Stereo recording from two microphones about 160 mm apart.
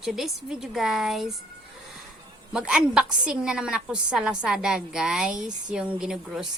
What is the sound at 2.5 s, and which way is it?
A woman's voice, 5° right (ahead or behind).